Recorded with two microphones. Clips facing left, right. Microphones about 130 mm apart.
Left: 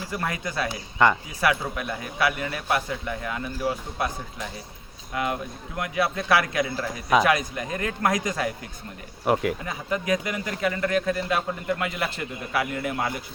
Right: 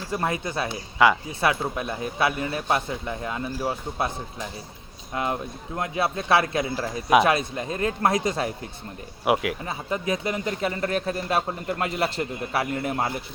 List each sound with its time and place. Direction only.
0.1 s a man's voice: 25° right (ahead or behind)
1.0 s speech: 5° right (ahead or behind)
1.4 s a man's voice: 25° right (ahead or behind)
5.1 s a man's voice: 30° right (ahead or behind)
9.2 s speech: 5° right (ahead or behind)
9.6 s speech: 30° right (ahead or behind)